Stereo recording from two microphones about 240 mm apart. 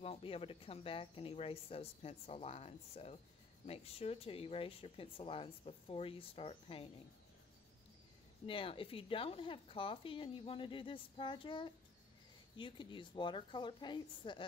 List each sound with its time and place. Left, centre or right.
0.0 s speech: left
8.5 s speech: left